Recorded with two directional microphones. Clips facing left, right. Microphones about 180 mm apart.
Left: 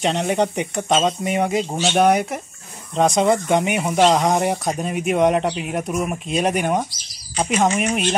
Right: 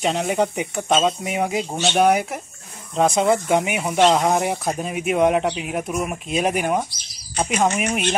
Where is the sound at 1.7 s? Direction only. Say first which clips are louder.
Left 1 dB; 5° left (ahead or behind).